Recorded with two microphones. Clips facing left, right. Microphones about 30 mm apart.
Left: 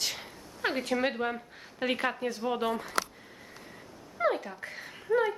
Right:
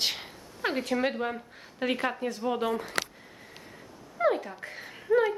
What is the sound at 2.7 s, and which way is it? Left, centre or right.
Speech, right.